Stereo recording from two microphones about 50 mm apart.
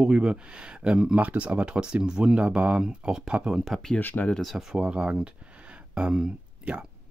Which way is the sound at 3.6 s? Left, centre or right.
Centre.